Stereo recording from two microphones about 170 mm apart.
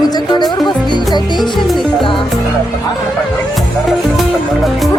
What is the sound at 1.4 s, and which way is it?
Music, centre (ahead or behind).